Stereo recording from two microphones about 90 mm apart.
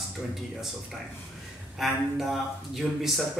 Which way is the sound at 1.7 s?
Centre (ahead or behind).